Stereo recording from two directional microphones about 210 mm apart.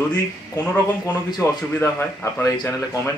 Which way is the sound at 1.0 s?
15° left (ahead or behind).